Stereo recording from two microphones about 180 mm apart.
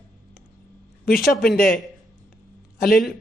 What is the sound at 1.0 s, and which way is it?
Speech, 55° left (ahead or behind).